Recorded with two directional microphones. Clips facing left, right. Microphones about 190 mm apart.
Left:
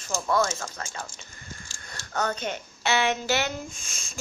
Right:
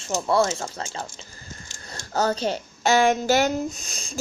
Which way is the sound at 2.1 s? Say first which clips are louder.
Right 6 dB; 35° right (ahead or behind).